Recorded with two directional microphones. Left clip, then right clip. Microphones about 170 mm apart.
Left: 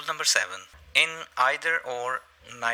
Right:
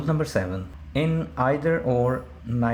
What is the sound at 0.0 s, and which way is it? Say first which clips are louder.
Speech: left 1 dB; 25° left (ahead or behind).